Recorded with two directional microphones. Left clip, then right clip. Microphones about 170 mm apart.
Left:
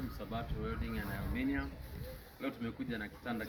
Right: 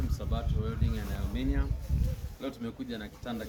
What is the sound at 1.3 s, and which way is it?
Speech, 20° right (ahead or behind).